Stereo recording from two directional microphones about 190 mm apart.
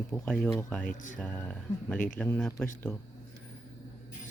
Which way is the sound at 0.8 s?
45° left (ahead or behind).